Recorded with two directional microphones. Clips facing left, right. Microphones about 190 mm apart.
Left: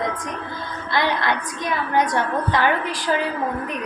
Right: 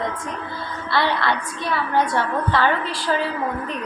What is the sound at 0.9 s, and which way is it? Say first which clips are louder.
A woman's voice: even; 15° left (ahead or behind).